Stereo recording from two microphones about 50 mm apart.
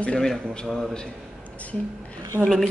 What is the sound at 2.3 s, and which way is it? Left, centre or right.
Speech, right.